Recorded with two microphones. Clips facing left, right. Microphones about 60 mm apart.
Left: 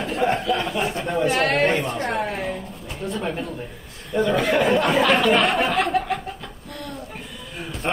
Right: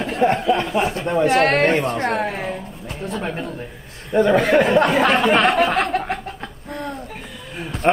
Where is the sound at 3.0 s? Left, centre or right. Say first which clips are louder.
Right 1 dB; right.